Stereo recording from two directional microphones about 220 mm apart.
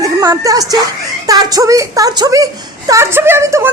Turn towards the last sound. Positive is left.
turn(degrees=-10)  # may be behind; listen again after turning